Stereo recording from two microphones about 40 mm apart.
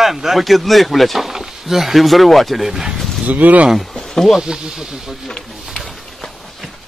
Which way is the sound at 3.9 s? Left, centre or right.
Centre.